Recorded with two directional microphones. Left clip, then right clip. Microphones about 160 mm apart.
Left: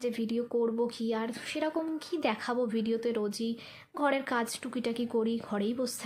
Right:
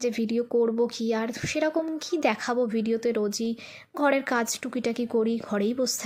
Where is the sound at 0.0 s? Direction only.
25° right (ahead or behind).